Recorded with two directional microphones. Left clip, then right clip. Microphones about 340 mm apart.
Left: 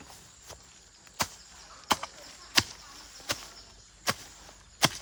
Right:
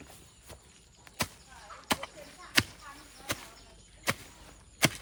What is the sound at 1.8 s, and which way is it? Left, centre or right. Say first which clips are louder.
Chop: left 4 dB; centre.